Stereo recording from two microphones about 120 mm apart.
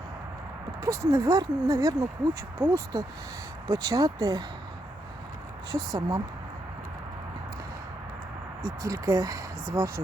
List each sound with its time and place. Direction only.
0.8 s speech: 25° right (ahead or behind)
5.7 s speech: 30° right (ahead or behind)
8.6 s speech: 25° right (ahead or behind)